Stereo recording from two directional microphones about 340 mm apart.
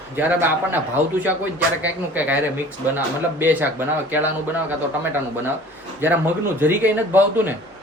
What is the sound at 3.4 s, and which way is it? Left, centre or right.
Speech, centre.